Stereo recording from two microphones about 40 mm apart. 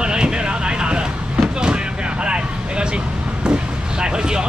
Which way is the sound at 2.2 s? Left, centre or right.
Right.